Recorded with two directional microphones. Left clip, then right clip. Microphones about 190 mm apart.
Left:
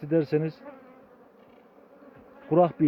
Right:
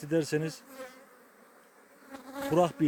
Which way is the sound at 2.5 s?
15° right (ahead or behind).